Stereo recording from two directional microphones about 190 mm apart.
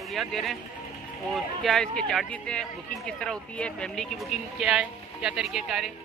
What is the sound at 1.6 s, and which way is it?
Speech, centre (ahead or behind).